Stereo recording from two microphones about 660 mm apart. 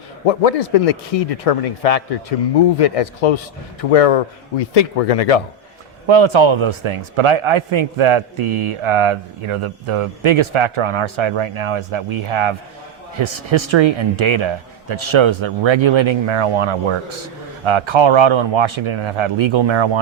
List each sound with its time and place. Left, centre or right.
0.3 s speech: left
6.1 s a man's voice: right